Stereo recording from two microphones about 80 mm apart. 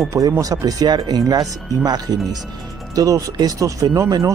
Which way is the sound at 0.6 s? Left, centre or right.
Right.